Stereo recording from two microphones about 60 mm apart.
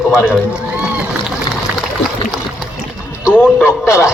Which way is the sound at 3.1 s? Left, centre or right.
Left.